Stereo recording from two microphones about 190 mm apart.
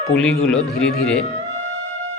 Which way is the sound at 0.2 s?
5° left (ahead or behind).